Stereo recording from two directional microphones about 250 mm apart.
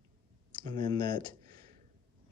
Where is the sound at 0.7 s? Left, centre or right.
Centre.